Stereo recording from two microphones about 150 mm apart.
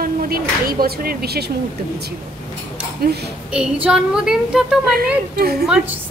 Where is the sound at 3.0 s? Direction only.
90° right.